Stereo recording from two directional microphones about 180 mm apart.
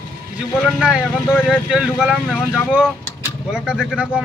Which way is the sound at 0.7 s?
5° right (ahead or behind).